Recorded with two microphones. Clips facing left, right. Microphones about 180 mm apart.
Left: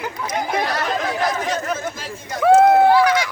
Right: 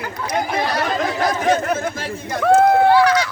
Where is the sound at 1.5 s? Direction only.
60° right (ahead or behind).